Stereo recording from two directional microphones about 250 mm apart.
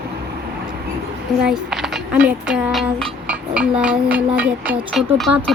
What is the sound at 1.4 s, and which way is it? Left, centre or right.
Speech, centre.